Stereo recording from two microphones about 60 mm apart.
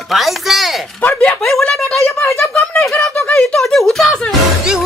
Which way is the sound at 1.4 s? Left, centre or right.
Centre.